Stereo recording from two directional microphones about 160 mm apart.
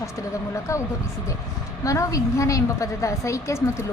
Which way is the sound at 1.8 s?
20° left (ahead or behind).